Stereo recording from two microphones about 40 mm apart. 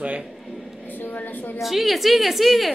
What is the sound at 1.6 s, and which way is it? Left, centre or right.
A woman's voice, centre.